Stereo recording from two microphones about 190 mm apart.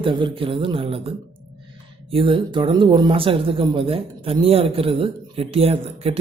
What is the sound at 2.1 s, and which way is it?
Speech, 25° right (ahead or behind).